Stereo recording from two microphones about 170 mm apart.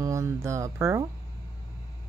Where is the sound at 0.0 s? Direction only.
15° right (ahead or behind).